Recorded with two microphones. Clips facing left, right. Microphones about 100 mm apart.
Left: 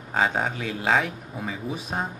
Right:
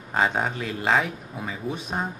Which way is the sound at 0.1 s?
Centre (ahead or behind).